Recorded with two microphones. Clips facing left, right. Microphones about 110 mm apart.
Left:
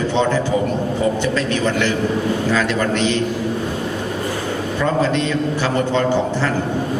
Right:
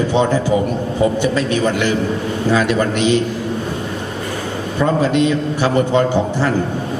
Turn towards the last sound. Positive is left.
turn(degrees=-15)  # may be behind; listen again after turning